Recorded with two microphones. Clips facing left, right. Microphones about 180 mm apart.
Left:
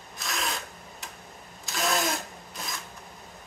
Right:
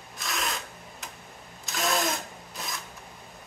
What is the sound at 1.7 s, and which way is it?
Tools, centre (ahead or behind).